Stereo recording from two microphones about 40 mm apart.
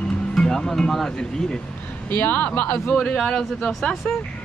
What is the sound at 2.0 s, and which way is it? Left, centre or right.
Speech, left.